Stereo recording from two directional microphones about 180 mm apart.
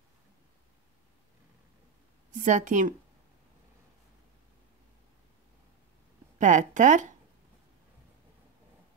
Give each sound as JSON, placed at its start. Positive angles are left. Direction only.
{"t": 2.3, "sound": "speech", "side_deg": -45}
{"t": 6.3, "sound": "speech", "side_deg": -45}